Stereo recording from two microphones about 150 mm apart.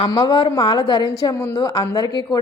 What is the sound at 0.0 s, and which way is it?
A woman's voice, 25° left (ahead or behind).